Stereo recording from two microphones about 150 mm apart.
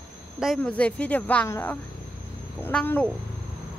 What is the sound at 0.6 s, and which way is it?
Speech, 10° left (ahead or behind).